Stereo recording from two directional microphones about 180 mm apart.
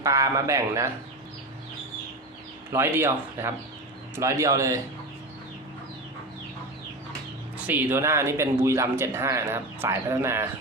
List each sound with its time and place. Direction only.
0.0 s speech: 20° right (ahead or behind)
2.7 s speech: 15° right (ahead or behind)
7.7 s speech: 10° right (ahead or behind)